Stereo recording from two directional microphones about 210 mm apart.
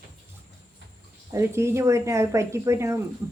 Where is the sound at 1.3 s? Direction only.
15° right (ahead or behind).